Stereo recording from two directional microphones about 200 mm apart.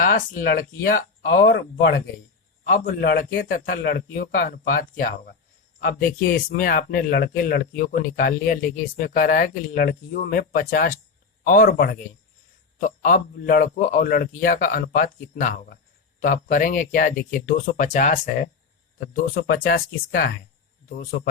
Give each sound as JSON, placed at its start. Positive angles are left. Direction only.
{"t": 0.0, "sound": "a man's voice", "side_deg": 45}
{"t": 1.3, "sound": "speech", "side_deg": 65}
{"t": 2.8, "sound": "a man's voice", "side_deg": 50}
{"t": 13.0, "sound": "a man's voice", "side_deg": 45}
{"t": 19.1, "sound": "a man's voice", "side_deg": 50}